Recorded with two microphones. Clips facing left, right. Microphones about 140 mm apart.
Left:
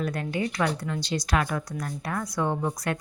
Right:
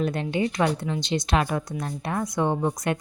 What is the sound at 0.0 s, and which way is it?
Speech, 25° right (ahead or behind).